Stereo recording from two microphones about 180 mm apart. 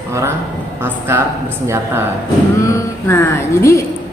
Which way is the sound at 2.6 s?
15° left (ahead or behind).